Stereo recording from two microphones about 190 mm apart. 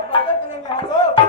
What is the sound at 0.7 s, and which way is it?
Speech, 25° left (ahead or behind).